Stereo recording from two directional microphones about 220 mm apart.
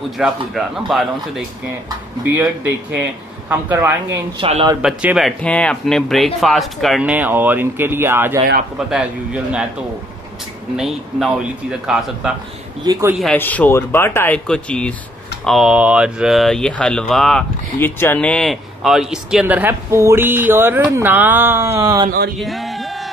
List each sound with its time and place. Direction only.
0.2 s speech: centre (ahead or behind)
3.4 s speech: 10° right (ahead or behind)
4.4 s speech: 25° right (ahead or behind)
4.8 s speech: centre (ahead or behind)
10.8 s speech: centre (ahead or behind)
12.8 s speech: 20° right (ahead or behind)
13.2 s speech: 5° left (ahead or behind); by 22.1 s 15° right (ahead or behind)
22.4 s a sound: centre (ahead or behind)